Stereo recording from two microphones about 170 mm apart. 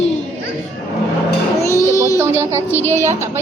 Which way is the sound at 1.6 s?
15° left (ahead or behind).